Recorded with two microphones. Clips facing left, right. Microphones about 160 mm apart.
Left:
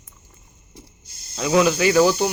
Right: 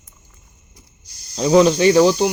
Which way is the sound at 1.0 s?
25° left (ahead or behind).